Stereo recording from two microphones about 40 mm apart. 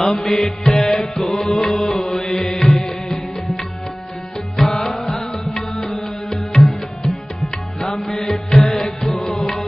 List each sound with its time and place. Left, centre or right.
0.0 s music: centre
0.7 s tabla: centre
1.1 s music: centre
4.6 s music: centre
8.0 s music: centre